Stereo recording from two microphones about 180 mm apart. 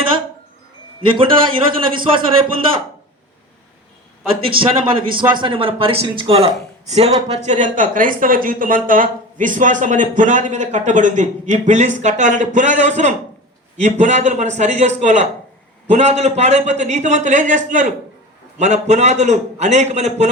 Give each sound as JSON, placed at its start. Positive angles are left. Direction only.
{"t": 1.1, "sound": "a man's voice", "side_deg": -30}
{"t": 4.6, "sound": "a man's voice", "side_deg": -55}
{"t": 5.4, "sound": "a man's voice", "side_deg": -30}